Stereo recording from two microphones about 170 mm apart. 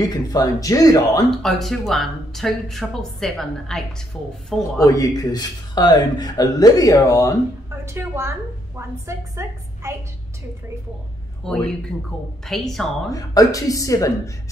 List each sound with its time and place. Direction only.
0.0 s a man's voice: 20° left (ahead or behind)
1.3 s speech: centre (ahead or behind)
4.8 s a man's voice: 20° left (ahead or behind)
7.8 s a woman's voice: 15° right (ahead or behind)
11.4 s speech: 5° left (ahead or behind)
13.1 s a man's voice: 20° left (ahead or behind)